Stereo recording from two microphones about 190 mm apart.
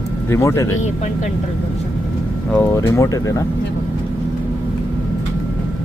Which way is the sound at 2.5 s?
15° left (ahead or behind).